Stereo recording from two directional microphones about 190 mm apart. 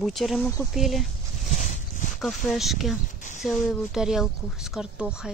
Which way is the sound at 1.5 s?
40° left (ahead or behind).